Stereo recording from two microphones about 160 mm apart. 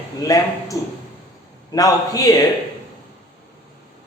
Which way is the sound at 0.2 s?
20° left (ahead or behind).